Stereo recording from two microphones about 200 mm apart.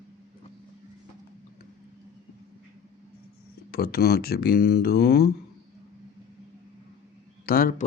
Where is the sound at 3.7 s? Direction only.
50° left (ahead or behind).